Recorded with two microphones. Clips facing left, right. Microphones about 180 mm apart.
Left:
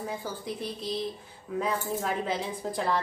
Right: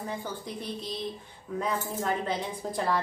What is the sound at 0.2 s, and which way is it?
A woman's voice, 5° left (ahead or behind).